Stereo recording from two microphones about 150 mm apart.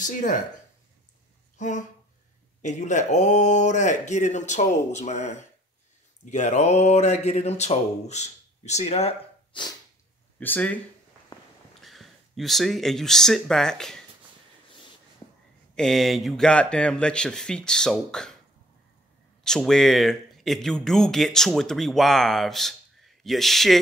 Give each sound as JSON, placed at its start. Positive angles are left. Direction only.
{"t": 0.0, "sound": "speech", "side_deg": 60}
{"t": 1.6, "sound": "speech", "side_deg": 55}
{"t": 10.4, "sound": "speech", "side_deg": 10}
{"t": 11.8, "sound": "speech", "side_deg": 0}
{"t": 15.7, "sound": "speech", "side_deg": 5}
{"t": 19.4, "sound": "speech", "side_deg": 5}